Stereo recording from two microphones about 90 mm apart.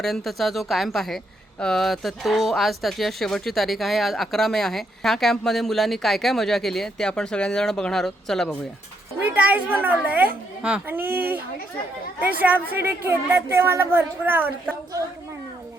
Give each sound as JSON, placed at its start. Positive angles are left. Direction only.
{"t": 0.0, "sound": "speech", "side_deg": 5}
{"t": 9.3, "sound": "a woman's voice", "side_deg": -20}